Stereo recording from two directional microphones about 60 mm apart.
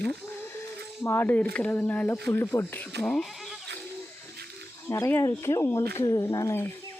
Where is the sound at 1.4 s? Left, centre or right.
Left.